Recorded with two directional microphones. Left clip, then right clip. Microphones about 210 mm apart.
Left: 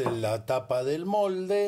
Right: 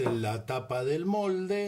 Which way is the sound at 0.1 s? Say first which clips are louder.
Left 4 dB; 30° left (ahead or behind).